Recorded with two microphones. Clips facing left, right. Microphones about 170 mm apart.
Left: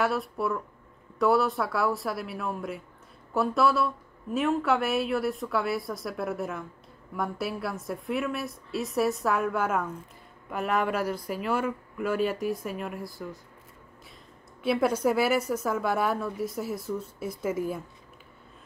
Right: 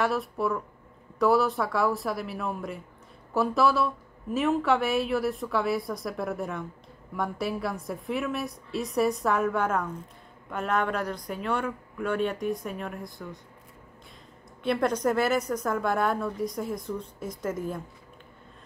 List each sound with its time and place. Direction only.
0.0 s speech: centre (ahead or behind)
14.6 s a woman's voice: 5° left (ahead or behind)